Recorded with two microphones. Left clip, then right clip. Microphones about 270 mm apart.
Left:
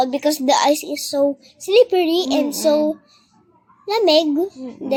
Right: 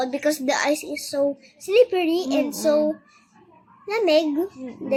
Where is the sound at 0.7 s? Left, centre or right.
Centre.